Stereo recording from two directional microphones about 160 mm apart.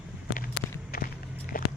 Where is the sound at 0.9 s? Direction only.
70° left (ahead or behind).